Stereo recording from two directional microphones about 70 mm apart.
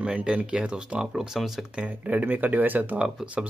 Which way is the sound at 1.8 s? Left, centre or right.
Right.